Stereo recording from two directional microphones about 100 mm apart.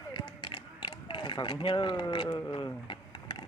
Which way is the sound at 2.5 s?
55° left (ahead or behind).